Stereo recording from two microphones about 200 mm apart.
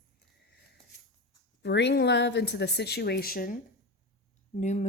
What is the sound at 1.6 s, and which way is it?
Speech, 60° left (ahead or behind).